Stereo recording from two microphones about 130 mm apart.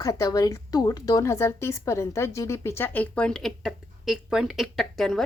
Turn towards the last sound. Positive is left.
turn(degrees=0)  # may be behind; listen again after turning